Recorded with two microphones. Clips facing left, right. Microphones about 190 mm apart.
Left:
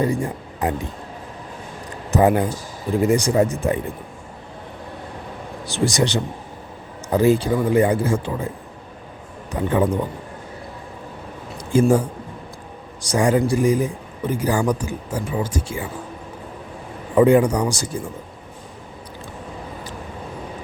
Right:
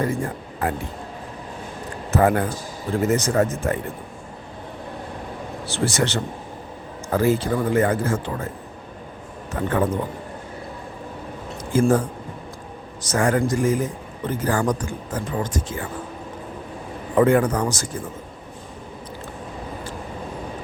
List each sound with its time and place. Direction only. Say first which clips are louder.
0.0 s speech: left 3 dB; 15° left (ahead or behind)
2.0 s speech: left 2 dB; 15° left (ahead or behind)
5.6 s speech: left 3 dB; 15° left (ahead or behind)
9.5 s speech: left 2 dB; 15° left (ahead or behind)
11.7 s speech: left 2 dB; 15° left (ahead or behind)
17.2 s speech: left 3 dB; 15° left (ahead or behind)